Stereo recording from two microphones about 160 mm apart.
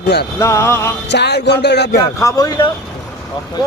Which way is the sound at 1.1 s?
90° left.